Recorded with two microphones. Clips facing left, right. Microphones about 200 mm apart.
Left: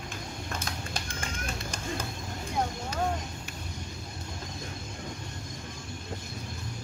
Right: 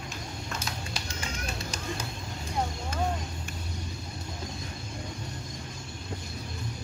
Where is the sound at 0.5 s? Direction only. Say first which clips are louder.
Left 1 dB; 50° left (ahead or behind).